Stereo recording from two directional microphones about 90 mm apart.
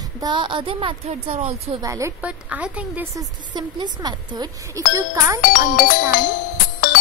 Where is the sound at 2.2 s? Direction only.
15° right (ahead or behind).